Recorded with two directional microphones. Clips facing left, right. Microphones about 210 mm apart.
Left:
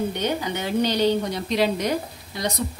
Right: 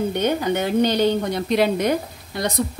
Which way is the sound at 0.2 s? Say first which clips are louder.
Right 5 dB; 50° right (ahead or behind).